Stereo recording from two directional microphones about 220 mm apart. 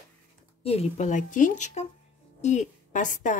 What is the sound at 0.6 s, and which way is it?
A woman's voice, 30° left (ahead or behind).